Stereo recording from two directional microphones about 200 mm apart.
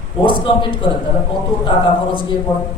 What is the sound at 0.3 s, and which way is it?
Speech, 25° left (ahead or behind).